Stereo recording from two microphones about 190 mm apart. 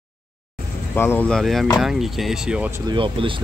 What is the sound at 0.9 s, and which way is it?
Speech, 10° left (ahead or behind).